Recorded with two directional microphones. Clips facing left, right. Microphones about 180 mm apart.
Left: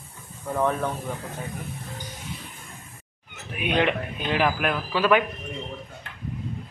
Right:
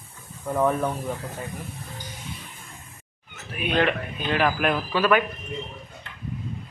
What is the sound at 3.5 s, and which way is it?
A man's voice, 15° left (ahead or behind).